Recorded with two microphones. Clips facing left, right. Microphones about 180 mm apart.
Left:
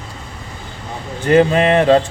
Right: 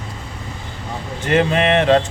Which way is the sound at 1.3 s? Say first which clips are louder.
Left 4 dB; 35° left (ahead or behind).